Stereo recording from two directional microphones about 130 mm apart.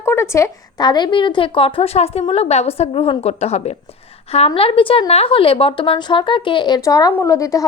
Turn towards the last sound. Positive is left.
turn(degrees=25)  # may be behind; listen again after turning